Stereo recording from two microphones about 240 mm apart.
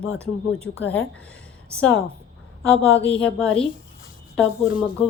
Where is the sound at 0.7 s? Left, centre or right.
Left.